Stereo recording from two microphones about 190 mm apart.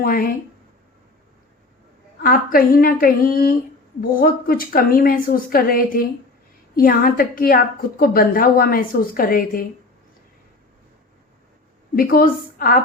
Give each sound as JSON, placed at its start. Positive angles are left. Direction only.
{"t": 0.0, "sound": "a woman's voice", "side_deg": 50}
{"t": 2.2, "sound": "a woman's voice", "side_deg": 50}
{"t": 11.9, "sound": "a woman's voice", "side_deg": 50}